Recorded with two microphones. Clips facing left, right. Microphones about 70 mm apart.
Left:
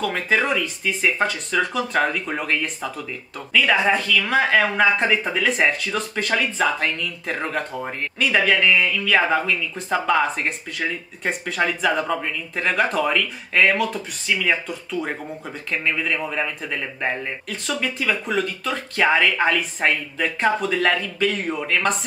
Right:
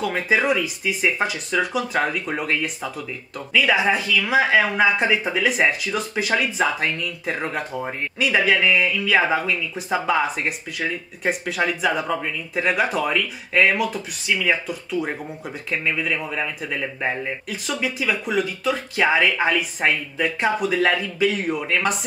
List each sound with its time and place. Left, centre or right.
0.0 s speech: centre